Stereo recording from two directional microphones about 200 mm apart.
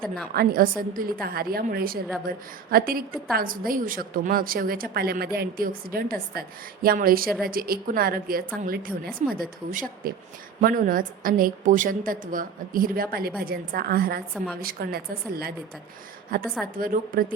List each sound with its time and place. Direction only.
0.3 s a woman's voice: 45° right (ahead or behind)